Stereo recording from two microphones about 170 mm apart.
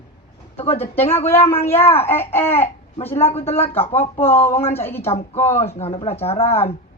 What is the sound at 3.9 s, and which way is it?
Speech, 10° left (ahead or behind).